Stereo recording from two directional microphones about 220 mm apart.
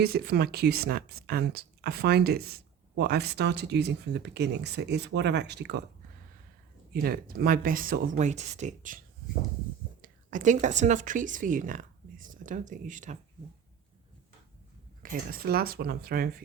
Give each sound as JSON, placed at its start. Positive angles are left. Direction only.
{"t": 0.0, "sound": "speech", "side_deg": -45}
{"t": 6.9, "sound": "speech", "side_deg": -45}
{"t": 10.0, "sound": "speech", "side_deg": -35}
{"t": 15.0, "sound": "speech", "side_deg": -40}